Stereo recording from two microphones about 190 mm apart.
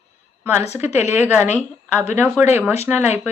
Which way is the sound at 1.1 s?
10° right (ahead or behind).